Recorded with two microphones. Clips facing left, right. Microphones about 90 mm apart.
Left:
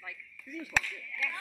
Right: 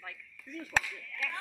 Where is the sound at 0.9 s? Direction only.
40° right (ahead or behind).